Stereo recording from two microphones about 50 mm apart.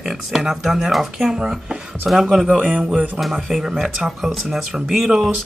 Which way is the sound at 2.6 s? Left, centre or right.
Right.